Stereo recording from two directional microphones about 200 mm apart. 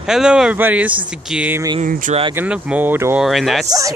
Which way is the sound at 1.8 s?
40° right (ahead or behind).